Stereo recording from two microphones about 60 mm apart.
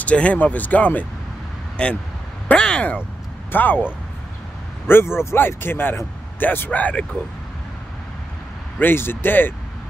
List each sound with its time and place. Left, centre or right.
0.0 s speech: left
4.8 s speech: left
6.7 s speech: left
8.7 s speech: left